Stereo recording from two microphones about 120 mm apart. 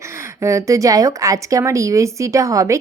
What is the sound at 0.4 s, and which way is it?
Speech, 25° right (ahead or behind).